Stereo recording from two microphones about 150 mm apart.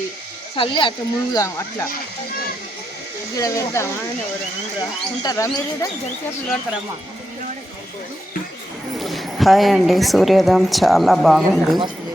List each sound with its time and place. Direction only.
0.5 s speech: 35° left (ahead or behind)
3.3 s speech: 20° left (ahead or behind)
9.0 s a woman's voice: centre (ahead or behind)